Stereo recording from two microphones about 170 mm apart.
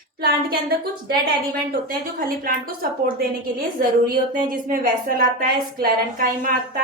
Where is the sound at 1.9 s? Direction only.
60° right (ahead or behind).